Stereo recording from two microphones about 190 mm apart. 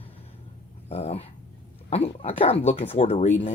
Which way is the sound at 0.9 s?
35° left (ahead or behind).